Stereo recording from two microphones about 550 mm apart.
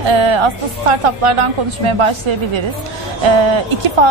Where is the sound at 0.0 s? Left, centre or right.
Right.